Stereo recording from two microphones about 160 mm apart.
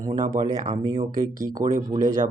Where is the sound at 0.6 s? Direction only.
35° right (ahead or behind).